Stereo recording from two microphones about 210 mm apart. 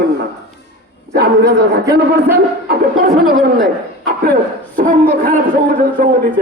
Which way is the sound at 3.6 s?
45° right (ahead or behind).